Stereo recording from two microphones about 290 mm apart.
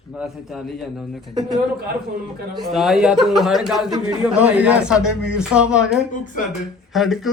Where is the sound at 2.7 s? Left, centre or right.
Centre.